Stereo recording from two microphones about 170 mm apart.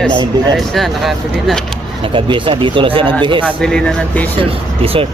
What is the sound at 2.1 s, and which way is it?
Speech, 30° right (ahead or behind).